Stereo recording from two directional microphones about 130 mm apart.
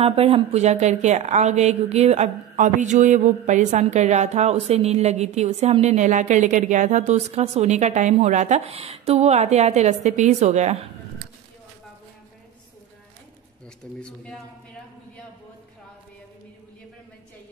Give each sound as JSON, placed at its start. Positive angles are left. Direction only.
{"t": 0.0, "sound": "a woman's voice", "side_deg": -50}
{"t": 13.9, "sound": "a man's voice", "side_deg": 5}